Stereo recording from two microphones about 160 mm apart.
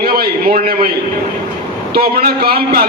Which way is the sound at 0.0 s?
75° right (ahead or behind).